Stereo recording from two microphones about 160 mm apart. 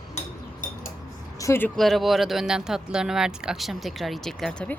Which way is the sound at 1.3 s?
15° left (ahead or behind).